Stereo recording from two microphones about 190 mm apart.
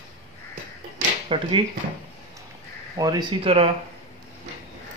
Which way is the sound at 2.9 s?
20° right (ahead or behind).